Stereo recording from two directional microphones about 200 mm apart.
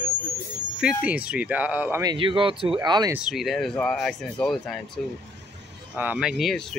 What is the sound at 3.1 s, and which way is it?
Speech, 5° right (ahead or behind).